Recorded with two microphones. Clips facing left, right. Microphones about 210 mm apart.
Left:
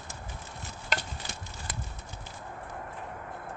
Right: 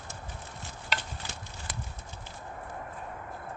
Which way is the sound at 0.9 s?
45° left (ahead or behind).